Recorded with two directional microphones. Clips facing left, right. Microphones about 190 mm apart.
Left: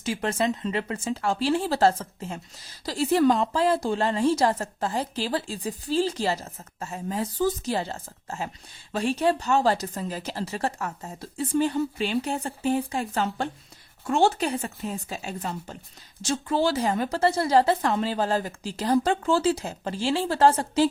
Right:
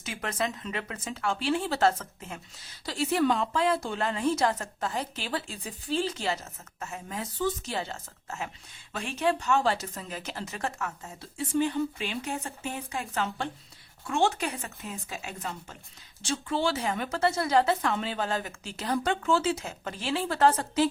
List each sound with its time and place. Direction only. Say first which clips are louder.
0.0 s a woman's voice: left 6 dB; 30° left (ahead or behind)